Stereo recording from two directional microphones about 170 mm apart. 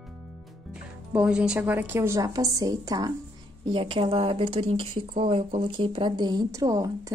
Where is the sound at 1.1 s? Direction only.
5° right (ahead or behind).